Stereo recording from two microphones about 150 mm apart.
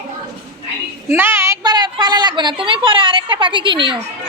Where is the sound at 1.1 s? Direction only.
15° right (ahead or behind); by 3.9 s 35° right (ahead or behind).